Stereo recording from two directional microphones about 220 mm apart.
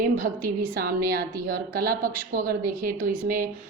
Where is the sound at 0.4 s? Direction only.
40° right (ahead or behind).